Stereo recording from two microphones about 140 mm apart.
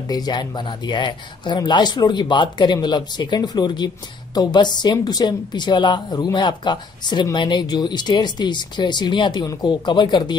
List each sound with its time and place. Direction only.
0.1 s speech: 30° left (ahead or behind)